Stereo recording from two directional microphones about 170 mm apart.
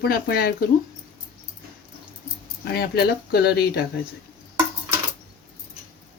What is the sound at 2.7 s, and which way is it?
Speech, 70° left (ahead or behind).